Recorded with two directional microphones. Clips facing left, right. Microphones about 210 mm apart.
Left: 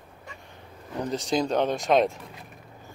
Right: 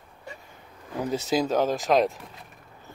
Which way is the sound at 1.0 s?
5° right (ahead or behind).